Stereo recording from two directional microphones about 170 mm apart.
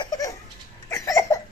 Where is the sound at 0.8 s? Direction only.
15° left (ahead or behind).